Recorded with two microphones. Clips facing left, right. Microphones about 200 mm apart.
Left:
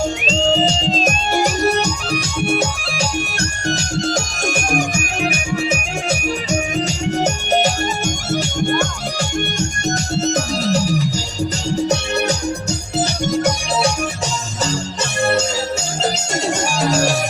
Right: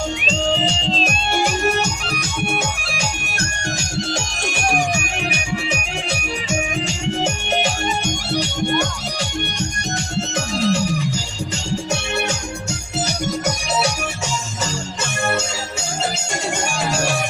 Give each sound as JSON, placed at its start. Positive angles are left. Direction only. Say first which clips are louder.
{"t": 0.3, "sound": "music", "louder": "left 4 dB", "side_deg": 40}
{"t": 10.2, "sound": "music", "louder": "left 1 dB", "side_deg": 40}
{"t": 15.2, "sound": "music", "louder": "left 5 dB", "side_deg": 35}
{"t": 16.7, "sound": "music", "louder": "left 5 dB", "side_deg": 40}